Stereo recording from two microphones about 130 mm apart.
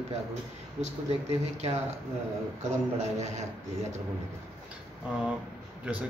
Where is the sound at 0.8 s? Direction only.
60° right (ahead or behind).